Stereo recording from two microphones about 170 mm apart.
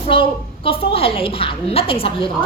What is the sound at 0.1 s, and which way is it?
A woman's voice, 30° left (ahead or behind).